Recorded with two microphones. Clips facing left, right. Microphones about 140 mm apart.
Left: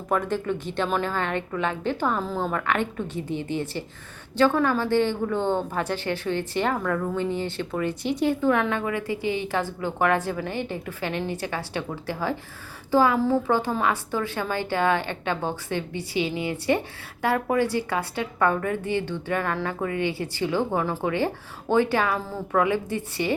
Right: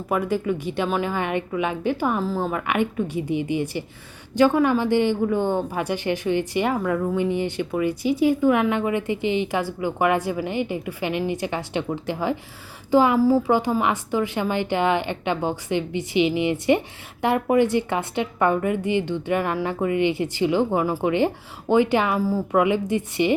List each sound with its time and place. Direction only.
0.1 s a woman's voice: 10° right (ahead or behind)